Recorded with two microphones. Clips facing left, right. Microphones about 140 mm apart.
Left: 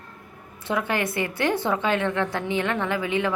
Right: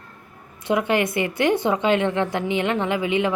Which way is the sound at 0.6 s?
15° right (ahead or behind).